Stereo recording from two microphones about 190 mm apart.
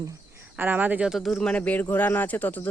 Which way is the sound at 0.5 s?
10° right (ahead or behind).